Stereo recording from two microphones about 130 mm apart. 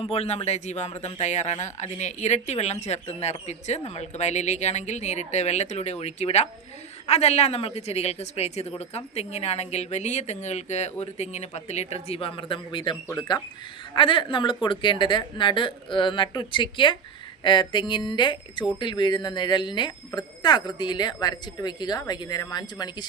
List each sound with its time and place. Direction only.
0.0 s speech: 50° left (ahead or behind); by 23.0 s 30° left (ahead or behind)